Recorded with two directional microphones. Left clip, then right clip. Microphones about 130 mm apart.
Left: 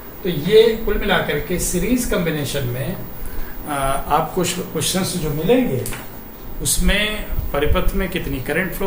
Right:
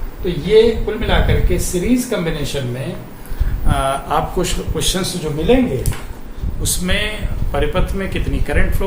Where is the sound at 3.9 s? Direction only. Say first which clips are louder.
Even; 20° right (ahead or behind).